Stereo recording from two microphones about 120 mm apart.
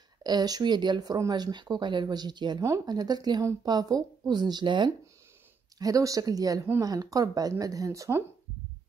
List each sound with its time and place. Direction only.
0.2 s speech: 35° right (ahead or behind)
5.8 s speech: 30° right (ahead or behind)